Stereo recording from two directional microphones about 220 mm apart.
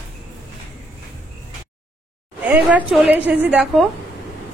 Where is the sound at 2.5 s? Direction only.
5° right (ahead or behind).